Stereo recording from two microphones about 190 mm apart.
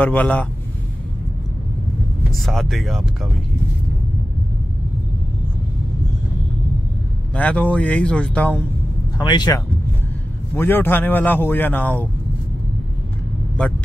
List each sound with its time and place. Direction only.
0.0 s a man's voice: 10° left (ahead or behind)
2.3 s speech: centre (ahead or behind)
7.3 s a man's voice: 10° left (ahead or behind)
9.2 s speech: 20° left (ahead or behind)
10.5 s a man's voice: 10° left (ahead or behind)